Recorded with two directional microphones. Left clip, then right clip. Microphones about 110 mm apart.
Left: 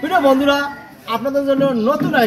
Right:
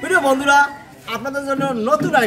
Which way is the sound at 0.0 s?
50° right (ahead or behind).